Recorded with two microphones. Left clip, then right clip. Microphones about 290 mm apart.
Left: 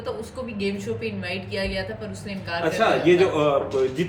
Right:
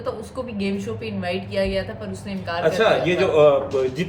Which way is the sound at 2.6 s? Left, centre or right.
Centre.